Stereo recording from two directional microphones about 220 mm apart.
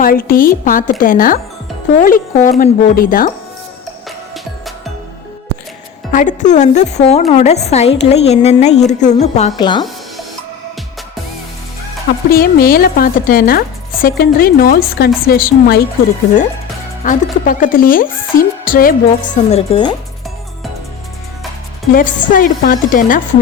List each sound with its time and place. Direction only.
0.0 s speech: 40° left (ahead or behind)
6.1 s a woman's voice: 35° left (ahead or behind)
12.3 s speech: 40° left (ahead or behind)
17.0 s speech: 35° left (ahead or behind); by 20.0 s 20° left (ahead or behind)
21.9 s speech: 35° left (ahead or behind)